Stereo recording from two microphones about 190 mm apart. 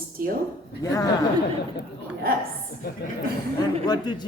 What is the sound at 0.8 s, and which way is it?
Speech, 15° left (ahead or behind).